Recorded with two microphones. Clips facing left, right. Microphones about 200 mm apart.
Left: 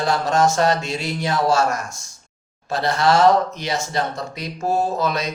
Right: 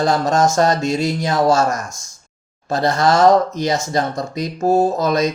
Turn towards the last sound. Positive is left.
turn(degrees=-45)  # may be behind; listen again after turning